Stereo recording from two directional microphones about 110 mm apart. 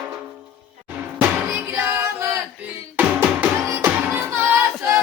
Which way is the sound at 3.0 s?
15° right (ahead or behind).